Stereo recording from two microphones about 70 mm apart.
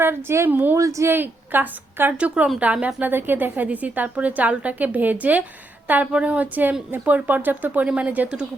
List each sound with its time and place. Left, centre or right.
0.0 s a woman's voice: right
0.8 s speech: right
1.1 s a woman's voice: right
2.1 s a woman's voice: centre
2.8 s a woman's voice: right